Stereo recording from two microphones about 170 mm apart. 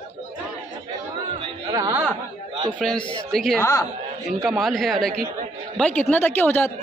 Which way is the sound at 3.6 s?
15° left (ahead or behind).